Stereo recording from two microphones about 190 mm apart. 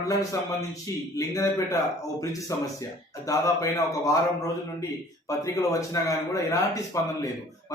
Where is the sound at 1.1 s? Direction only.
15° left (ahead or behind).